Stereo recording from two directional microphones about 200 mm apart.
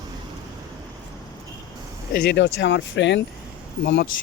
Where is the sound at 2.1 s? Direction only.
55° left (ahead or behind).